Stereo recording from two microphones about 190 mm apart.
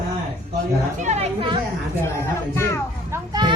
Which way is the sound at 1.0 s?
30° right (ahead or behind).